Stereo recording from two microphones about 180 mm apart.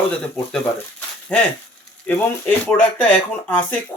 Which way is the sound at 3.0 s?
10° left (ahead or behind).